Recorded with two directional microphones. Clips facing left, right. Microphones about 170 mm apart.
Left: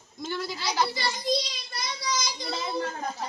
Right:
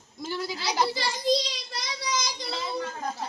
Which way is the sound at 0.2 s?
10° right (ahead or behind).